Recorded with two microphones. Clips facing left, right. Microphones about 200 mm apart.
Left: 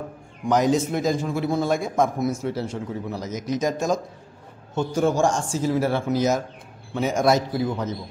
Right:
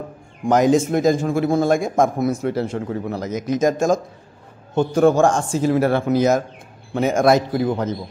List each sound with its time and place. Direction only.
0.5 s a man's voice: 50° right (ahead or behind)